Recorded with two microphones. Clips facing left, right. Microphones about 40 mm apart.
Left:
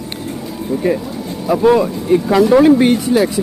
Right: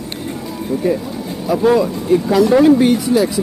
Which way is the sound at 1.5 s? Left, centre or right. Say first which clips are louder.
Left 2 dB; left.